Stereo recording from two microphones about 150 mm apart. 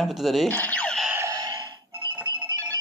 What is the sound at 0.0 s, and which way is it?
Speech, centre (ahead or behind).